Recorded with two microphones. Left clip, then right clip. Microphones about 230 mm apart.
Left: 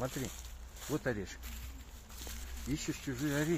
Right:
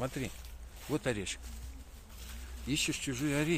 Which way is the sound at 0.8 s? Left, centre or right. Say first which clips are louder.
Right 2 dB; centre.